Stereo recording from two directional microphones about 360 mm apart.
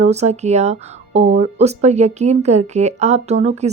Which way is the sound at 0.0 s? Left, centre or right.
Centre.